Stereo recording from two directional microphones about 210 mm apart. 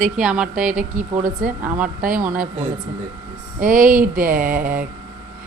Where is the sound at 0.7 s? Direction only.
35° right (ahead or behind).